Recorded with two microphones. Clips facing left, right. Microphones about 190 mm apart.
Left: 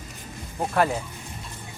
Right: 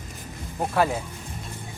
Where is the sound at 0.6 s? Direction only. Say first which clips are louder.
Even; 5° right (ahead or behind).